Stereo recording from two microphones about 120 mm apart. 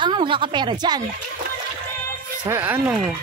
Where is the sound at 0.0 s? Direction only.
40° right (ahead or behind).